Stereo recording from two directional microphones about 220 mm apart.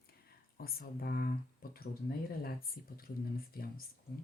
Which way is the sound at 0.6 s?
45° left (ahead or behind).